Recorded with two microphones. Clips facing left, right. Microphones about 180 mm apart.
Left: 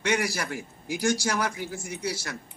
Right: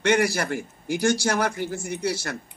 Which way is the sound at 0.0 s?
60° right (ahead or behind).